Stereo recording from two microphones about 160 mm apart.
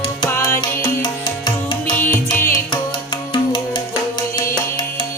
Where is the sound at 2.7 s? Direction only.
25° left (ahead or behind).